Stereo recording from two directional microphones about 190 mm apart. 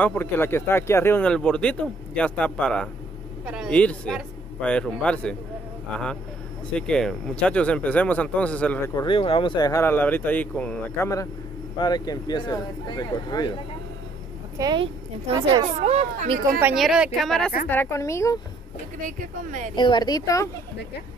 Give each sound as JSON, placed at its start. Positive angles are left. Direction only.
{"t": 0.0, "sound": "speech", "side_deg": 10}
{"t": 6.7, "sound": "speech", "side_deg": 5}
{"t": 9.0, "sound": "speech", "side_deg": 25}
{"t": 11.8, "sound": "speech", "side_deg": 20}
{"t": 14.6, "sound": "speech", "side_deg": -20}
{"t": 15.8, "sound": "speech", "side_deg": -35}
{"t": 16.5, "sound": "speech", "side_deg": -5}
{"t": 17.6, "sound": "speech", "side_deg": 10}
{"t": 19.0, "sound": "speech", "side_deg": -40}
{"t": 19.7, "sound": "speech", "side_deg": 25}